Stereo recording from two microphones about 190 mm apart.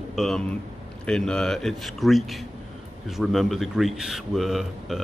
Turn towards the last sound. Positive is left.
turn(degrees=0)  # may be behind; listen again after turning